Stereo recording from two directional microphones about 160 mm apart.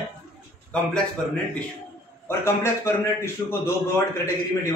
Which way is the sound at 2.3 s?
15° left (ahead or behind).